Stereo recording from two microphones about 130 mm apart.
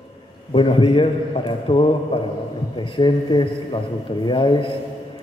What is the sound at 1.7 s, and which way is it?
Mantra, 45° left (ahead or behind).